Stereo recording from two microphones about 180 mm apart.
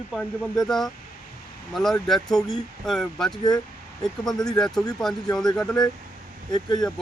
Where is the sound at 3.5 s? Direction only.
20° left (ahead or behind).